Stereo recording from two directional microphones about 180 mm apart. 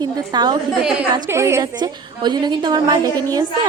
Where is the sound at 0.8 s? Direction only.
5° right (ahead or behind).